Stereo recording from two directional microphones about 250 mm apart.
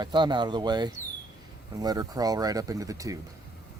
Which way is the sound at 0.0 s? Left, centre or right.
Centre.